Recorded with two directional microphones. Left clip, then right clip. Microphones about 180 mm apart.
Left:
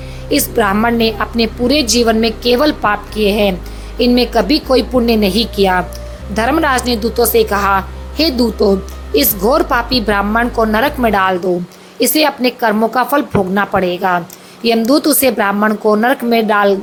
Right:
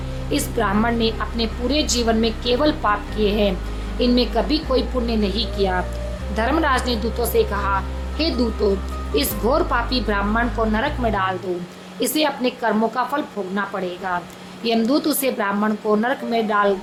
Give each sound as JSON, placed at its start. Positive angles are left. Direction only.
{"t": 0.3, "sound": "a woman's voice", "side_deg": 30}